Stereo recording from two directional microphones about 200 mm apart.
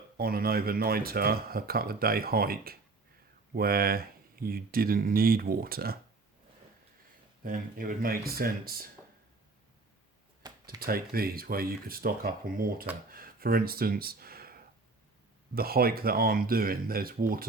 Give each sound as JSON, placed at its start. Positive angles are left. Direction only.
{"t": 0.2, "sound": "speech", "side_deg": -50}
{"t": 7.4, "sound": "speech", "side_deg": -45}
{"t": 10.4, "sound": "a sound", "side_deg": -20}
{"t": 10.8, "sound": "speech", "side_deg": -50}